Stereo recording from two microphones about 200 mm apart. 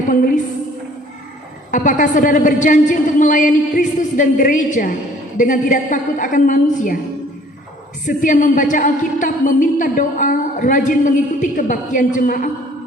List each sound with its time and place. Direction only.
0.1 s a woman's voice: 40° left (ahead or behind)
1.7 s a woman's voice: 40° left (ahead or behind)
8.0 s a woman's voice: 40° left (ahead or behind)